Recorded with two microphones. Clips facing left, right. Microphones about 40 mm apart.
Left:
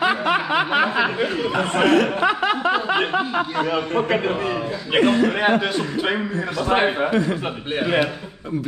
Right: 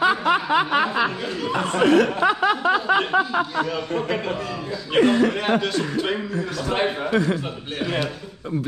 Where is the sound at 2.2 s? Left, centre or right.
Left.